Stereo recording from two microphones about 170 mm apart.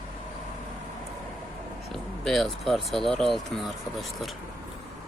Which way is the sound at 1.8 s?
Centre (ahead or behind).